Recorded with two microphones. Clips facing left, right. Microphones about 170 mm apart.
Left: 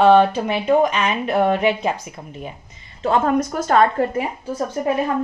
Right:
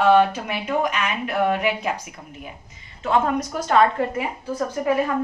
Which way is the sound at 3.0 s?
35° left (ahead or behind).